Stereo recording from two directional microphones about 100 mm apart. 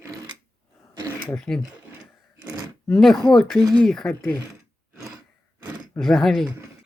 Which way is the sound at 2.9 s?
Centre (ahead or behind).